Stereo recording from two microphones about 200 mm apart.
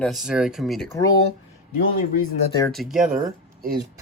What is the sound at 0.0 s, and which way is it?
Speech, centre (ahead or behind).